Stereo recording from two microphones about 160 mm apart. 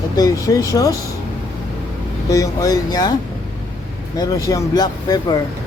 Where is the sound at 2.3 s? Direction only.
20° left (ahead or behind).